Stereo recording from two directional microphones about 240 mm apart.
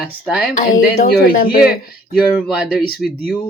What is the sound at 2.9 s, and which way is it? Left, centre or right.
Speech, left.